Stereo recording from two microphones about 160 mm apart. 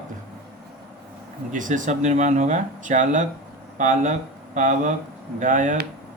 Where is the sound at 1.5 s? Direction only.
55° right (ahead or behind).